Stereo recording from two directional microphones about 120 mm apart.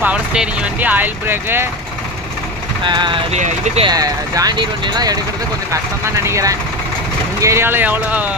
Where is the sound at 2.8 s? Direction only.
40° right (ahead or behind).